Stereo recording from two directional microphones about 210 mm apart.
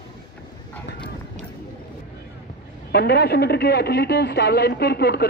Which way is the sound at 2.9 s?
50° left (ahead or behind).